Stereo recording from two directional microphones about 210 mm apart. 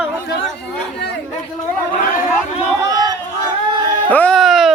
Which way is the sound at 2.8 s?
20° right (ahead or behind).